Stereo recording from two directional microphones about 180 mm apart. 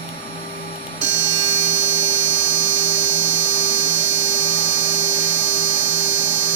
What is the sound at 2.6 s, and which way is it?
Dental drill, 90° right.